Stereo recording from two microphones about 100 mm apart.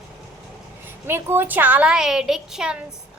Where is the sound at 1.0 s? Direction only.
25° right (ahead or behind).